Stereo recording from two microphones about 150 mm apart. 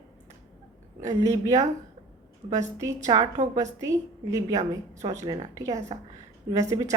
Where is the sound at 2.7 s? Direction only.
20° right (ahead or behind).